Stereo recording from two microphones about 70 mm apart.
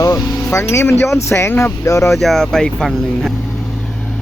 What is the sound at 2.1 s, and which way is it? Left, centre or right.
Speech, centre.